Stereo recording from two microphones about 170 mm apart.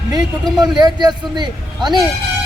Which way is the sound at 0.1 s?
25° right (ahead or behind).